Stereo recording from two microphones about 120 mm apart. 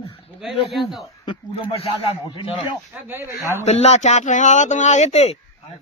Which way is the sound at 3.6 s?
65° left (ahead or behind).